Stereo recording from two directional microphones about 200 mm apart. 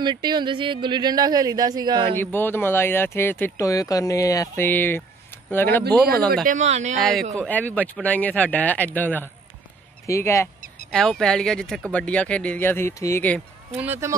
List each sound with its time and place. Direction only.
0.0 s speech: 20° right (ahead or behind)
2.1 s speech: 10° left (ahead or behind)
6.4 s speech: 35° right (ahead or behind)
7.0 s speech: centre (ahead or behind)
10.9 s speech: centre (ahead or behind)
13.7 s speech: 10° right (ahead or behind)